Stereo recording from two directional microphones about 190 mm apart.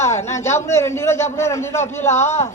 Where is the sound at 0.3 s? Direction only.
15° left (ahead or behind).